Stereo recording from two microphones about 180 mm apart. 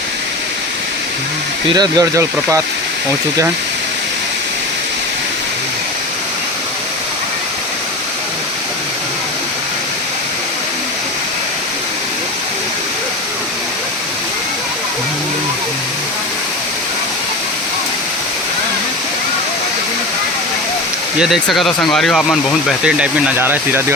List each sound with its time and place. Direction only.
1.7 s speech: 20° right (ahead or behind)
21.2 s speech: centre (ahead or behind)